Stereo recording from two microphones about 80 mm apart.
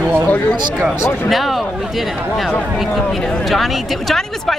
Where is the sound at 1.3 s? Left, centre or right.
Centre.